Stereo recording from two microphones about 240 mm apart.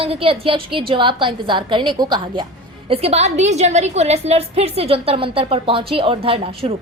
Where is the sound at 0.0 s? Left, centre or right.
Right.